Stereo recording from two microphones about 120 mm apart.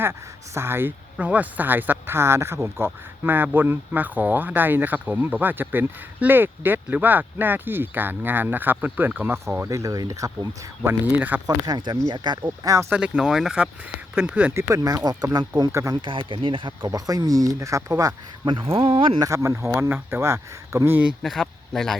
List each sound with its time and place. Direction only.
0.0 s speech: 20° right (ahead or behind)
9.6 s speech: 30° right (ahead or behind)
11.0 s speech: 15° right (ahead or behind)
11.4 s speech: 35° right (ahead or behind)
12.6 s speech: 25° right (ahead or behind)
12.9 s speech: 5° right (ahead or behind)
14.7 s speech: 25° right (ahead or behind)
16.0 s speech: 45° right (ahead or behind)
16.9 s speech: 30° right (ahead or behind)
18.5 s speech: 50° right (ahead or behind)
19.2 s speech: 25° right (ahead or behind)
21.2 s speech: centre (ahead or behind)